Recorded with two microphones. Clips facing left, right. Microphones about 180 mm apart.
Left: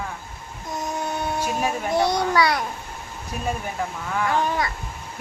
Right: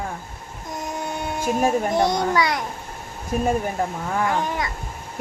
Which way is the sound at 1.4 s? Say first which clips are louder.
Right 9 dB; 45° right (ahead or behind).